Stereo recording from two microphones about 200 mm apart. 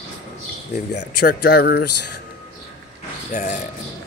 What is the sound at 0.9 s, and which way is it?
Speech, 50° left (ahead or behind).